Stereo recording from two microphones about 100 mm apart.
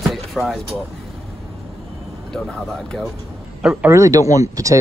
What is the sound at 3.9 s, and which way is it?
Speech, 30° right (ahead or behind).